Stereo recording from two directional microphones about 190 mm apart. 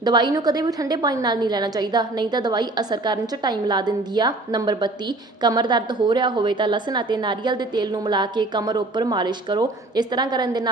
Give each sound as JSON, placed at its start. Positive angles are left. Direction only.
{"t": 0.0, "sound": "a woman's voice", "side_deg": -20}